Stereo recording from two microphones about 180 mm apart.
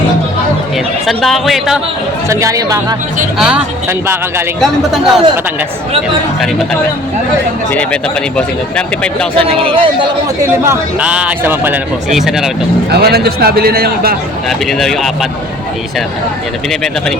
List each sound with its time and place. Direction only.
1.0 s speech: centre (ahead or behind)
2.3 s speech: 15° right (ahead or behind)
3.3 s speech: 5° right (ahead or behind)
4.6 s speech: centre (ahead or behind)
9.6 s speech: 30° right (ahead or behind)
10.7 s speech: 5° right (ahead or behind)
12.9 s a man's voice: 60° right (ahead or behind)
14.7 s speech: centre (ahead or behind)